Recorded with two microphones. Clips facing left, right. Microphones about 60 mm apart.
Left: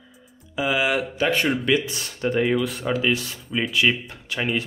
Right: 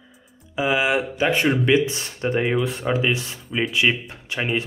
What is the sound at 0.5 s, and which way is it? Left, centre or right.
Speech, right.